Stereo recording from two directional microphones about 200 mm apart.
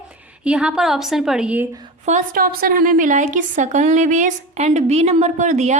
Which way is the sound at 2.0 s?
40° right (ahead or behind).